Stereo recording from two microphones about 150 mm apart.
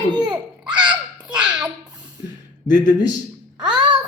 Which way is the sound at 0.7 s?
30° right (ahead or behind).